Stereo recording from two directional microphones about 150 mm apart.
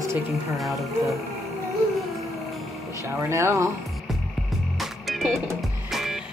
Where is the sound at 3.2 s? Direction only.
20° right (ahead or behind).